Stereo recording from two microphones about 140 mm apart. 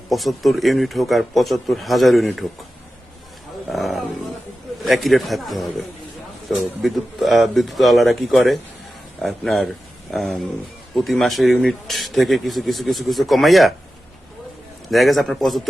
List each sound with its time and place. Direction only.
0.1 s speech: centre (ahead or behind)
3.7 s roaring cats: centre (ahead or behind)
4.9 s speech: centre (ahead or behind)
14.8 s speech: centre (ahead or behind)